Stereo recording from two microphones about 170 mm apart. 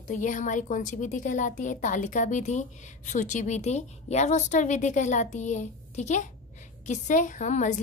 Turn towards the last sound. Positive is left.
turn(degrees=45)  # may be behind; listen again after turning